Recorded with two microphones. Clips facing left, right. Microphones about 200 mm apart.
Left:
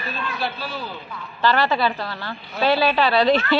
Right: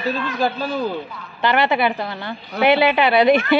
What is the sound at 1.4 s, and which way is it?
A woman's voice, 20° right (ahead or behind).